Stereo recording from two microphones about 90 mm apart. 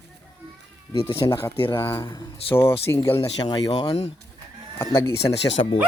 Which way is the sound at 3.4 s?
50° left (ahead or behind).